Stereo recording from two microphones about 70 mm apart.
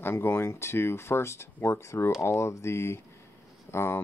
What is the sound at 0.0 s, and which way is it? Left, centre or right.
Speech, left.